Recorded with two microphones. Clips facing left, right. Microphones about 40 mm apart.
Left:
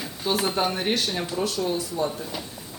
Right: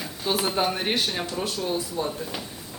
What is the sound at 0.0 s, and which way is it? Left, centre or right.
Speech, centre.